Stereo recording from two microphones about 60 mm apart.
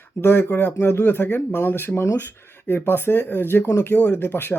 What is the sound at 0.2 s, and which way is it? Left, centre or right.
Speech, left.